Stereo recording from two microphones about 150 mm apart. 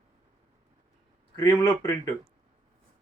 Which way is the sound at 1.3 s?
20° left (ahead or behind).